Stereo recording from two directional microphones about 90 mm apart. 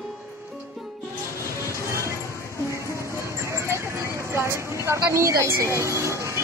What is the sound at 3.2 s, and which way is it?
Vehicle, 35° right (ahead or behind).